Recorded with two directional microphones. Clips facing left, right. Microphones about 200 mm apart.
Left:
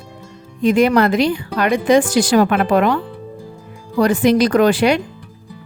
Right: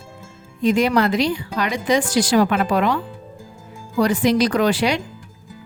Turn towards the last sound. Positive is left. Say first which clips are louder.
# left 5 dB
turn(degrees=55)  # may be behind; listen again after turning